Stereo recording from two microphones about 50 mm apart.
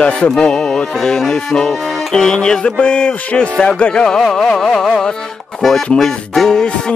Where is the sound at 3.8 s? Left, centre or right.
Centre.